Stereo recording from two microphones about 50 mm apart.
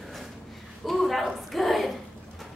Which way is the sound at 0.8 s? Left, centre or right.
Centre.